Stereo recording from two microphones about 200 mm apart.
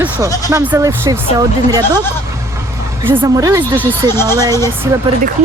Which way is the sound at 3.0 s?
10° right (ahead or behind).